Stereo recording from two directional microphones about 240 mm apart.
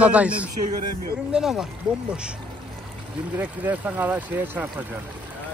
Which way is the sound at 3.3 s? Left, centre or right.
Centre.